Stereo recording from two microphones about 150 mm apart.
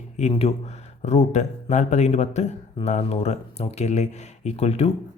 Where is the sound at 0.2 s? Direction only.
45° left (ahead or behind).